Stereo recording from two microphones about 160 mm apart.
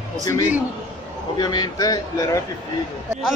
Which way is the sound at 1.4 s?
25° left (ahead or behind).